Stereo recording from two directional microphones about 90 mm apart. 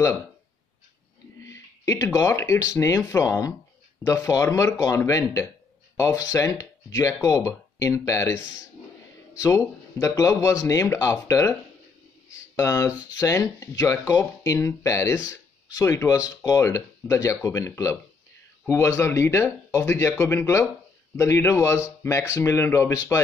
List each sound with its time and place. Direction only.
1.4 s a sound: 35° left (ahead or behind)
2.1 s speech: 35° left (ahead or behind)
9.4 s speech: 35° left (ahead or behind)